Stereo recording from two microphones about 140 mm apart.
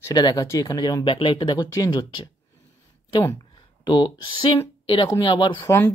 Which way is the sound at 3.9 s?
30° left (ahead or behind).